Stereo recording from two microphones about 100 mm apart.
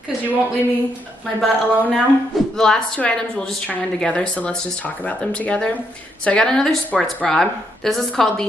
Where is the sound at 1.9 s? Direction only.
5° left (ahead or behind).